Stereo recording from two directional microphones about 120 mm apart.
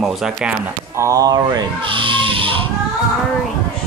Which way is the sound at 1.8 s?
45° right (ahead or behind).